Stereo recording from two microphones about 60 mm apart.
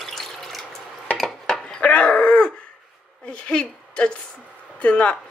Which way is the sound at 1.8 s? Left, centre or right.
Centre.